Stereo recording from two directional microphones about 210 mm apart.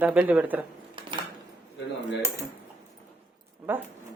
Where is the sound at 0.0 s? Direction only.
5° right (ahead or behind).